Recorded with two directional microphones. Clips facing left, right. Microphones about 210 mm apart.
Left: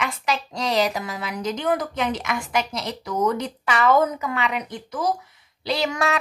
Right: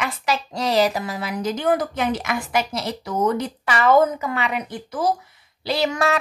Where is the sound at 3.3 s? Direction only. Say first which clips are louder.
Right 1 dB; 5° right (ahead or behind).